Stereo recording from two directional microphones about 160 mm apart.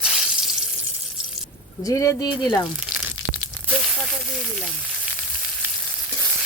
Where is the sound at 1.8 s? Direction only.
20° left (ahead or behind).